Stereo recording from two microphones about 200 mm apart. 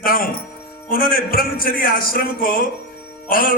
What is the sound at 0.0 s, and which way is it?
Music, 45° left (ahead or behind).